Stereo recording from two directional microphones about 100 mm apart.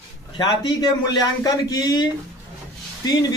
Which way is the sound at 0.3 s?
45° left (ahead or behind).